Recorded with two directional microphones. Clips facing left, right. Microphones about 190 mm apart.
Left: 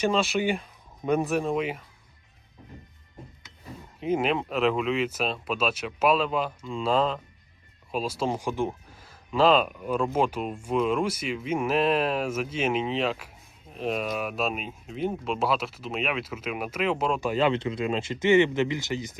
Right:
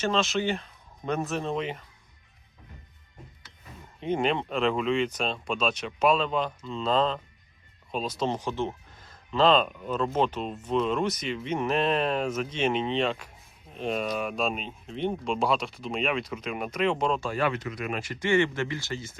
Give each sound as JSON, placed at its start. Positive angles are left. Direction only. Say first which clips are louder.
{"t": 0.0, "sound": "speech", "louder": "left 2 dB", "side_deg": 10}
{"t": 4.0, "sound": "speech", "louder": "left 1 dB", "side_deg": 5}
{"t": 17.2, "sound": "speech", "louder": "left 4 dB", "side_deg": 20}